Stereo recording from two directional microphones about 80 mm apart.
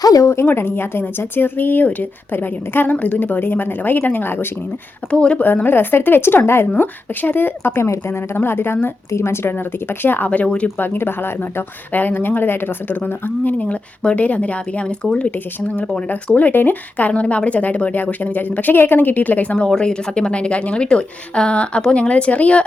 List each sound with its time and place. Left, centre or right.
0.0 s speech: left
0.4 s a woman's voice: left
5.1 s speech: centre
5.6 s a woman's voice: left
10.8 s a woman's voice: left
16.0 s speech: centre